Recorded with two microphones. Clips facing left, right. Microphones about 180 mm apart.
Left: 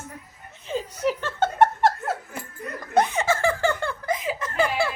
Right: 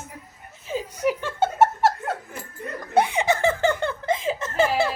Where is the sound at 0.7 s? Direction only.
10° right (ahead or behind).